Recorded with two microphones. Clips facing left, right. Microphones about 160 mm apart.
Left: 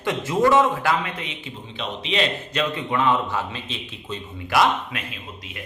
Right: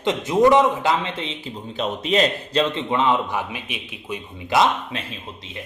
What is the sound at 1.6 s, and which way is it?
A man's voice, 45° right (ahead or behind).